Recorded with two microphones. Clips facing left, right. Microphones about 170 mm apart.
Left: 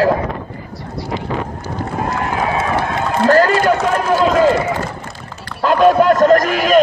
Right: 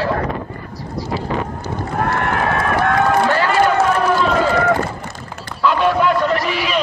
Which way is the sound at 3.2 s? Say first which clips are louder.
Left 6 dB; 45° left (ahead or behind).